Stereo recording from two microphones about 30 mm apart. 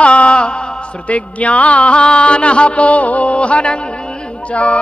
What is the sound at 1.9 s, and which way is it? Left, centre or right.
Music, left.